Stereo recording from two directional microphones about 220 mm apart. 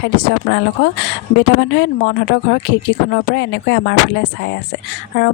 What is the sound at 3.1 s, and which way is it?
Speech, 50° left (ahead or behind).